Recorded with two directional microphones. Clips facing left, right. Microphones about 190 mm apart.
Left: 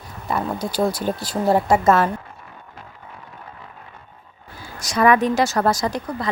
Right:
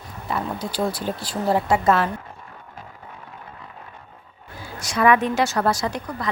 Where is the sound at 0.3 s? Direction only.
45° left (ahead or behind).